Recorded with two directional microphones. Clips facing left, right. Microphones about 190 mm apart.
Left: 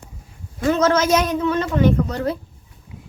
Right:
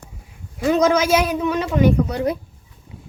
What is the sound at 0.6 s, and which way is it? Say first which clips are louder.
Speech: right 1 dB; 15° right (ahead or behind).